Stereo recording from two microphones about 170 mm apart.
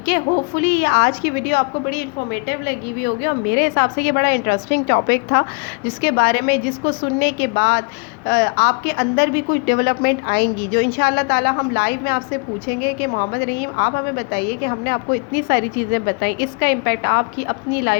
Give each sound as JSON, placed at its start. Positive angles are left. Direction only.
{"t": 0.0, "sound": "a woman's voice", "side_deg": 65}